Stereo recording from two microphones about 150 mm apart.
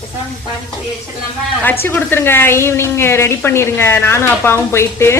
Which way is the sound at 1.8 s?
15° left (ahead or behind).